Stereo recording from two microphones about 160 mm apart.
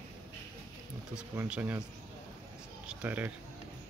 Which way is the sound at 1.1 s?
10° right (ahead or behind).